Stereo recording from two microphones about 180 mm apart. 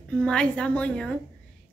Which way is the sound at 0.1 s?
5° left (ahead or behind).